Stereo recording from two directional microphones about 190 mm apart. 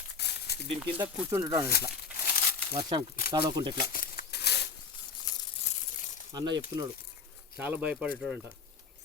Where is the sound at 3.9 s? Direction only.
50° left (ahead or behind).